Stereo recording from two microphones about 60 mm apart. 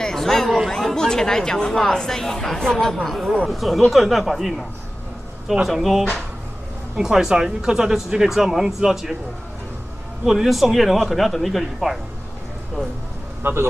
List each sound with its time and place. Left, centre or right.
0.0 s chatter: centre
0.7 s speech: centre
10.2 s speech: centre
13.4 s speech: right